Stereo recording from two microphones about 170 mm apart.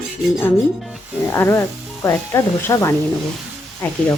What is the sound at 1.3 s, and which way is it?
Speech, 15° left (ahead or behind).